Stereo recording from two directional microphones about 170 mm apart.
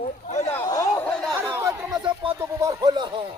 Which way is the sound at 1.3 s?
15° right (ahead or behind).